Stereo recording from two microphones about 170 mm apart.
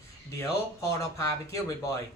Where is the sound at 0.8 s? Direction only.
15° left (ahead or behind).